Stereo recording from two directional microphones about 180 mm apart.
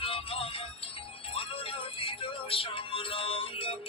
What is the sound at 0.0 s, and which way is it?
Music, 30° left (ahead or behind).